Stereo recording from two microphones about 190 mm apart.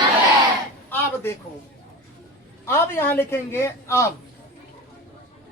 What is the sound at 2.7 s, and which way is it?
A woman's voice, 15° left (ahead or behind).